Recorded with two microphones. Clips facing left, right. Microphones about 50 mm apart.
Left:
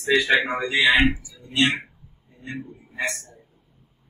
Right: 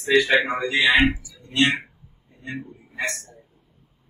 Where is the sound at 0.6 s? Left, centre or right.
Centre.